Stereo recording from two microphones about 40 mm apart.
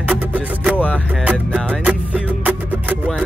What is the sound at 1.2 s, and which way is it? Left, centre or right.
Music, right.